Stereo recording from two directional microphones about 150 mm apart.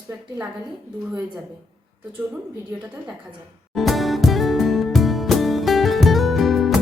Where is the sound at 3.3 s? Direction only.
Centre (ahead or behind).